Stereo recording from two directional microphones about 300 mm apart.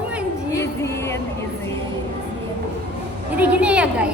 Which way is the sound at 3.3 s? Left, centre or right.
Centre.